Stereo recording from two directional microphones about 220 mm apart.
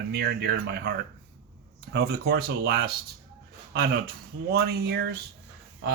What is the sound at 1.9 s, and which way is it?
Speech, 45° right (ahead or behind).